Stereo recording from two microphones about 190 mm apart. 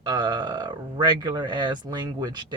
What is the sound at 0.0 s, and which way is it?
Speech, 20° right (ahead or behind).